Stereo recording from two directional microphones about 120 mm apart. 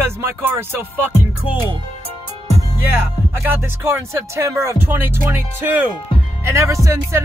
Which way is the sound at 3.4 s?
20° right (ahead or behind).